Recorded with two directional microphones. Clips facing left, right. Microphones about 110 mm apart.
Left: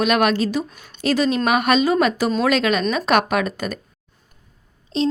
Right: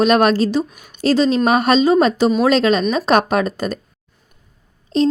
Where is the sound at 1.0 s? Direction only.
30° right (ahead or behind).